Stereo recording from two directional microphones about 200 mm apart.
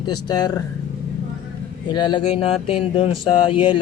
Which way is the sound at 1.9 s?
20° left (ahead or behind).